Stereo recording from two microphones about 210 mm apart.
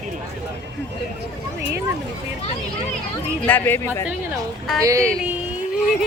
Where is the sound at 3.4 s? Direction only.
10° left (ahead or behind).